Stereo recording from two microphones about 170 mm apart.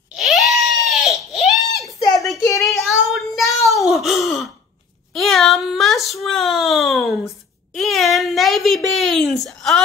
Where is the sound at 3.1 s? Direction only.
Centre (ahead or behind).